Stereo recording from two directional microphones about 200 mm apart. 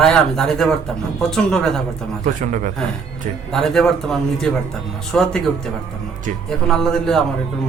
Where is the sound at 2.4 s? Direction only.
40° right (ahead or behind).